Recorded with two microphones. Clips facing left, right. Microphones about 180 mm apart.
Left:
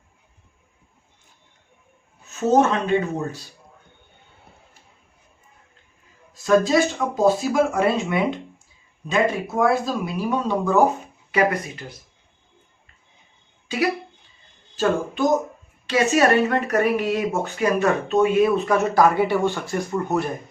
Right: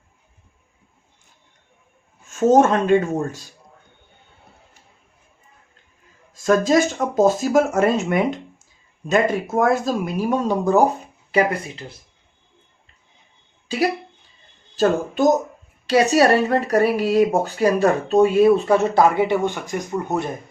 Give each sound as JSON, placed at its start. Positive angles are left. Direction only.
{"t": 2.2, "sound": "speech", "side_deg": -50}
{"t": 6.3, "sound": "speech", "side_deg": -45}
{"t": 11.3, "sound": "speech", "side_deg": -30}
{"t": 13.7, "sound": "speech", "side_deg": -30}